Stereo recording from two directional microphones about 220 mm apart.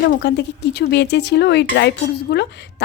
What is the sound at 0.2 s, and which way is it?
Cutlery, 50° left (ahead or behind).